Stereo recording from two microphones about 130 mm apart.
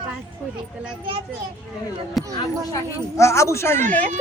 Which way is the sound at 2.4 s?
25° left (ahead or behind).